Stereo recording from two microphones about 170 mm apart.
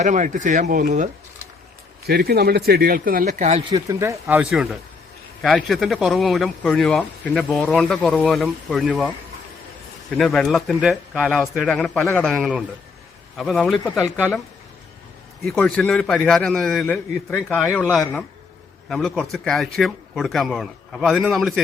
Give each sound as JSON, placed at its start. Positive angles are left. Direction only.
{"t": 0.0, "sound": "speech", "side_deg": -45}
{"t": 2.0, "sound": "speech", "side_deg": -70}
{"t": 3.7, "sound": "speech", "side_deg": -20}
{"t": 4.4, "sound": "speech", "side_deg": 0}
{"t": 10.2, "sound": "speech", "side_deg": 0}
{"t": 15.4, "sound": "speech", "side_deg": 5}